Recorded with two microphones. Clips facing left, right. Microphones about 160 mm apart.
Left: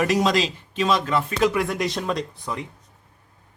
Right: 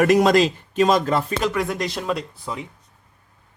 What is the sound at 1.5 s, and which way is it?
Speech, centre (ahead or behind).